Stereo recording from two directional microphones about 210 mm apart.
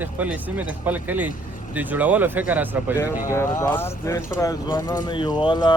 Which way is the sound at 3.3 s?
10° left (ahead or behind).